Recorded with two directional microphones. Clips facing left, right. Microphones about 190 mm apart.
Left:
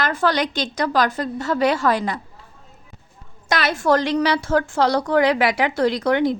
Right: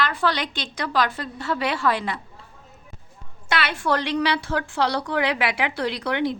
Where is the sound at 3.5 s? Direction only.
40° left (ahead or behind).